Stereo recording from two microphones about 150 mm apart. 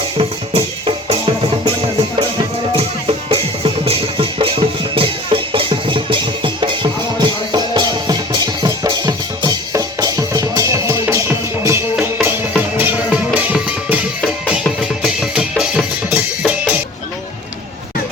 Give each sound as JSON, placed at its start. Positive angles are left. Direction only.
{"t": 0.2, "sound": "music", "side_deg": -40}